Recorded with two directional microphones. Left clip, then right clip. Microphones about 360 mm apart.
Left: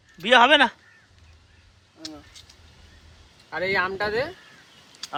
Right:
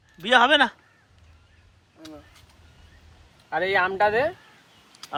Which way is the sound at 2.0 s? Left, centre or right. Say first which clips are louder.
Left 5 dB; centre.